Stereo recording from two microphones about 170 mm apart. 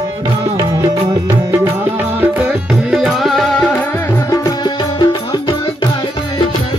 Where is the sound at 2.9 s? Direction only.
Centre (ahead or behind); by 5.5 s 25° left (ahead or behind).